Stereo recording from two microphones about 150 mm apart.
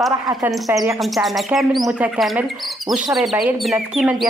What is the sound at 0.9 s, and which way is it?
Speech, centre (ahead or behind).